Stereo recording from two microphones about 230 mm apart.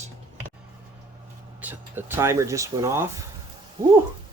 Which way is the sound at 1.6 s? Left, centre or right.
Centre.